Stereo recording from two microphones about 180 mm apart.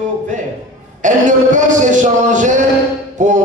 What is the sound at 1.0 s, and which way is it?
A man's voice, 45° right (ahead or behind).